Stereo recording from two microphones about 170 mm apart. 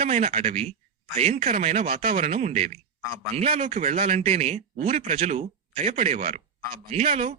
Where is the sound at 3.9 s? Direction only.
55° right (ahead or behind).